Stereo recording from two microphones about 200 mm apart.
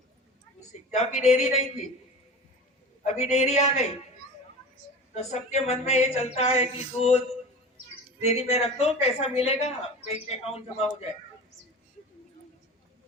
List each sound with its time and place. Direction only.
0.7 s a woman's voice: 35° left (ahead or behind)
3.0 s a woman's voice: 35° left (ahead or behind)
5.1 s a woman's voice: 35° left (ahead or behind)
8.3 s a woman's voice: 35° left (ahead or behind)